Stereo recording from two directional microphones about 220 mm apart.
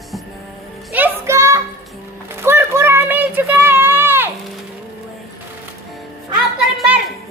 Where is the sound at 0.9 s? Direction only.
10° right (ahead or behind).